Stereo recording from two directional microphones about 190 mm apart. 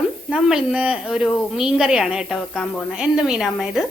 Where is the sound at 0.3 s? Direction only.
5° right (ahead or behind).